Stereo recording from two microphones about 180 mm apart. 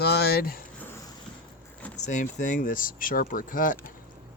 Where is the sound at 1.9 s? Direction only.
40° left (ahead or behind).